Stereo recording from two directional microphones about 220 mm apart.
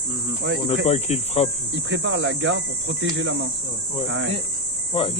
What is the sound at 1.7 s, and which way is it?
Speech, 55° right (ahead or behind).